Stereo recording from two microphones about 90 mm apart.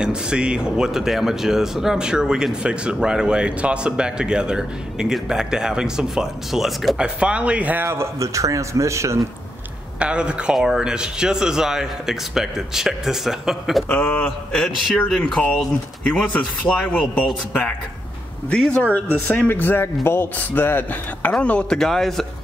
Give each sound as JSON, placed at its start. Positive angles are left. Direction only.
{"t": 0.0, "sound": "speech", "side_deg": -10}
{"t": 7.0, "sound": "speech", "side_deg": -10}
{"t": 9.9, "sound": "speech", "side_deg": -10}
{"t": 13.8, "sound": "a man's voice", "side_deg": 15}